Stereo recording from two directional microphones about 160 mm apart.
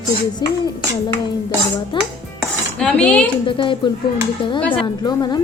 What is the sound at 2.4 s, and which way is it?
Cutlery, 5° left (ahead or behind).